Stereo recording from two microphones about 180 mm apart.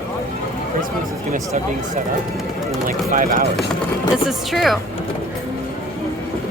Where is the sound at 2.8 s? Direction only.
50° right (ahead or behind).